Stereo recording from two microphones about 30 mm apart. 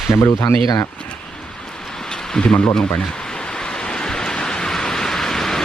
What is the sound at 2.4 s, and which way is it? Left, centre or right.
Speech, left.